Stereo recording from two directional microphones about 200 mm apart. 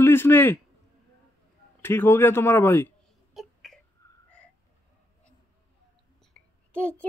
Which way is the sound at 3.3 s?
Centre (ahead or behind).